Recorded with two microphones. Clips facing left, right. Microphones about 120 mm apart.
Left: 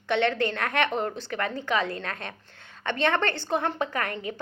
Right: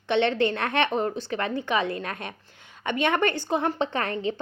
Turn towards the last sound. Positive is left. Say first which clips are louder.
# right 3 dB
turn(degrees=-25)  # may be behind; listen again after turning